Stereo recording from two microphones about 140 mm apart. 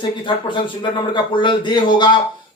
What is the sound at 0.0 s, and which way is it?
Speech, 35° left (ahead or behind).